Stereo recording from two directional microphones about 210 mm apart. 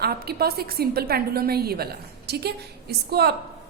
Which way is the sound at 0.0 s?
50° right (ahead or behind).